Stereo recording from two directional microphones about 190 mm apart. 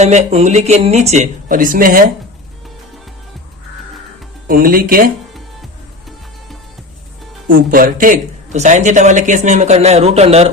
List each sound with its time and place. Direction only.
0.0 s speech: 35° right (ahead or behind)
4.4 s speech: 50° right (ahead or behind)
7.4 s speech: 50° right (ahead or behind)